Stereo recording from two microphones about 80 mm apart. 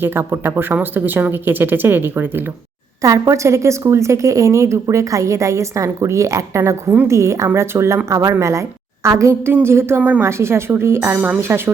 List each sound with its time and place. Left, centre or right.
0.0 s speech: right
3.0 s a woman's voice: right
10.0 s speech: centre
10.2 s a woman's voice: right